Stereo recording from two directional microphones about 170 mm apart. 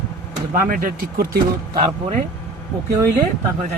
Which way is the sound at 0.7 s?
60° right (ahead or behind).